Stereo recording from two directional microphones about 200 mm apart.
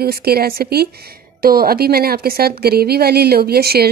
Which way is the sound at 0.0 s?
50° right (ahead or behind).